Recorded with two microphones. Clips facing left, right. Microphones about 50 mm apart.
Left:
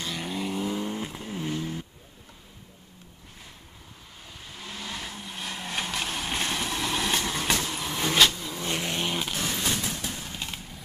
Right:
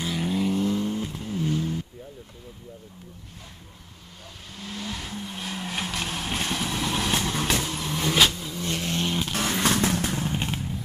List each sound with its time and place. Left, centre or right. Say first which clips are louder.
0.0 s vehicle: right 5 dB; centre
4.6 s vehicle: right 2 dB; centre
8.5 s vehicle: right 1 dB; centre
9.3 s vehicle: right 5 dB; right
10.2 s vehicle: right 8 dB; right